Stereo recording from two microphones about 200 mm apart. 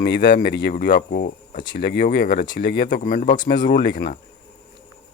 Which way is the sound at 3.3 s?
20° left (ahead or behind).